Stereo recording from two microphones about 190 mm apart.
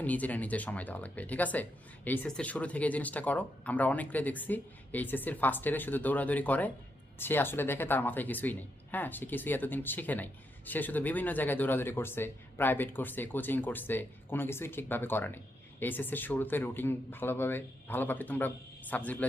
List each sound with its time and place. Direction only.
0.0 s speech: 10° left (ahead or behind)